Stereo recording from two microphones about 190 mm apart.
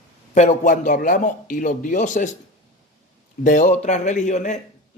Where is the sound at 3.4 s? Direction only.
40° left (ahead or behind).